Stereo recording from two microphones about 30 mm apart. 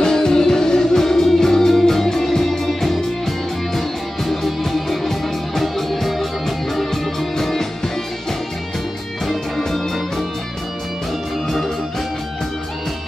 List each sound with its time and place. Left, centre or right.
0.0 s music: left
11.4 s music: centre